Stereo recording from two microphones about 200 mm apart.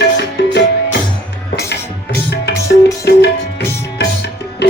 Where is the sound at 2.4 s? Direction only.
55° left (ahead or behind).